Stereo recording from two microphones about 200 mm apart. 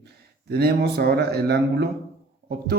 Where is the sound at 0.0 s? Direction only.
55° right (ahead or behind).